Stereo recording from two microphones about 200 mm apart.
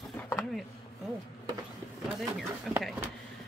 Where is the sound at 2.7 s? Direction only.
Centre (ahead or behind).